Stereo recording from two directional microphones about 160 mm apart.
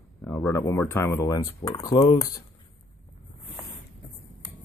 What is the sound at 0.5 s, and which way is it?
Speech, 15° left (ahead or behind).